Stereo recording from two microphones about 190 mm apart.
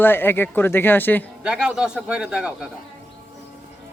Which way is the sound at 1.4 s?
5° right (ahead or behind).